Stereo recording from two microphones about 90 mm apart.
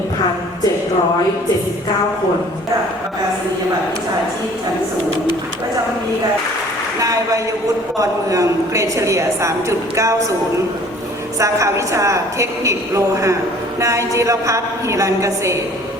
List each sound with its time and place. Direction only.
7.0 s a woman's voice: 40° right (ahead or behind)
11.3 s a woman's voice: 35° right (ahead or behind)